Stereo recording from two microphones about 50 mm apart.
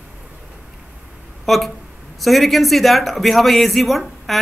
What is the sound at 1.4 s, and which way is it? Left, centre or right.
Speech, centre.